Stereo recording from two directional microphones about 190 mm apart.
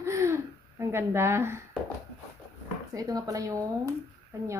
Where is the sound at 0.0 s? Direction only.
15° right (ahead or behind).